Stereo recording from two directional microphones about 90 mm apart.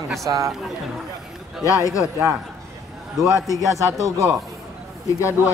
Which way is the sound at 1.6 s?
35° left (ahead or behind).